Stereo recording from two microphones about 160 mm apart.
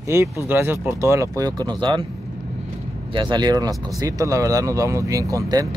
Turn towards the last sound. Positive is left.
turn(degrees=-20)  # may be behind; listen again after turning